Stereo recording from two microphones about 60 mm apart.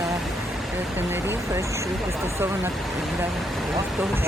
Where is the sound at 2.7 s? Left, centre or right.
Centre.